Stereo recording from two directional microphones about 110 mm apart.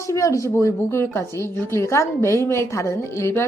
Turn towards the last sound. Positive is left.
turn(degrees=25)  # may be behind; listen again after turning